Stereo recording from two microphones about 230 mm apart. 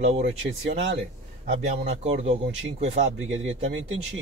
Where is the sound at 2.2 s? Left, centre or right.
Right.